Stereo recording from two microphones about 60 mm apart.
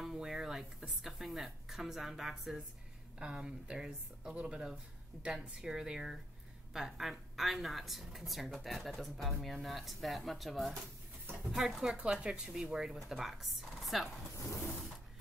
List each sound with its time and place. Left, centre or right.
0.0 s speech: centre
11.9 s speech: centre